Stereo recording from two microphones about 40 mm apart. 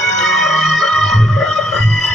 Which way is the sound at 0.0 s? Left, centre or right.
Centre.